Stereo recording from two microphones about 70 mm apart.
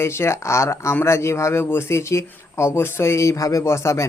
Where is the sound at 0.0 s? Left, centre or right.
Left.